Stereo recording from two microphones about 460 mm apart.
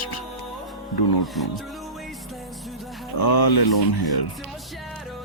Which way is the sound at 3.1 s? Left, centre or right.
Left.